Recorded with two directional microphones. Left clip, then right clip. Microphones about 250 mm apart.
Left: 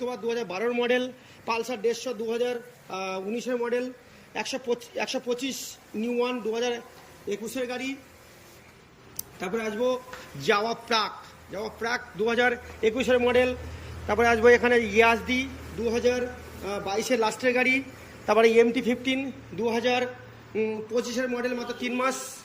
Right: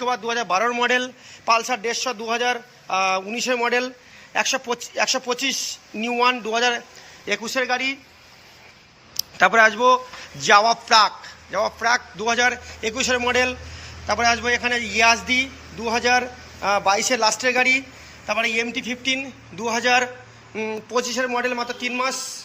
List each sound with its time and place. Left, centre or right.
0.0 s a man's voice: centre
3.4 s speech: right
4.7 s a man's voice: centre
9.2 s a sound: centre
9.6 s a man's voice: centre